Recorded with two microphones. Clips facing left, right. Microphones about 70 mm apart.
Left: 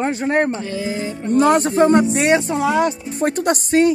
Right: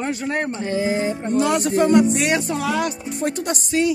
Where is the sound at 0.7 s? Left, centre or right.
Right.